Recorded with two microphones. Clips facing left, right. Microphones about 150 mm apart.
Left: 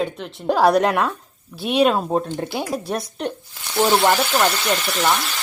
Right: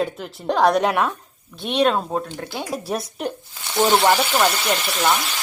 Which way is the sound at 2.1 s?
25° left (ahead or behind).